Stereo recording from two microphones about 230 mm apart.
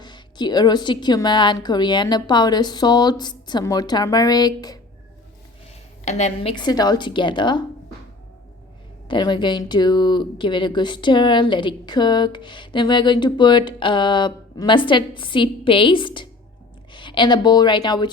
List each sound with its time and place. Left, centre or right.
0.0 s a woman's voice: centre
6.1 s speech: left
9.0 s a woman's voice: centre